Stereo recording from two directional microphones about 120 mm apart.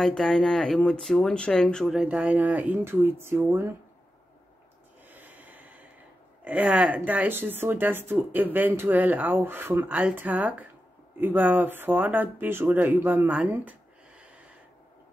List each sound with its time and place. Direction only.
0.0 s speech: 5° left (ahead or behind)
2.0 s speech: 10° right (ahead or behind)
5.0 s snort: 15° right (ahead or behind)
6.4 s speech: 10° right (ahead or behind)